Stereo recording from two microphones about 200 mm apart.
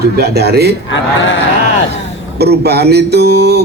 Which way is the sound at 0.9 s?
70° left (ahead or behind).